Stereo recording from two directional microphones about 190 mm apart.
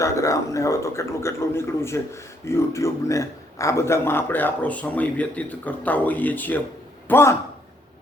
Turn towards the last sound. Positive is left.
turn(degrees=15)  # may be behind; listen again after turning